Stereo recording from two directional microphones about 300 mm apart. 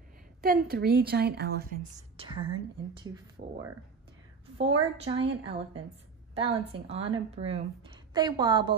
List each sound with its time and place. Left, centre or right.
0.4 s a woman's voice: right
1.8 s a woman's voice: centre
4.6 s a woman's voice: centre